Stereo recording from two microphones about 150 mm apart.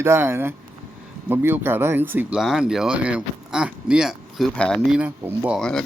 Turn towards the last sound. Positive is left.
turn(degrees=5)  # may be behind; listen again after turning